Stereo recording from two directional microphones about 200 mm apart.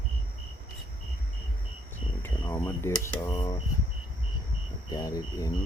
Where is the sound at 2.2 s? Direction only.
10° left (ahead or behind).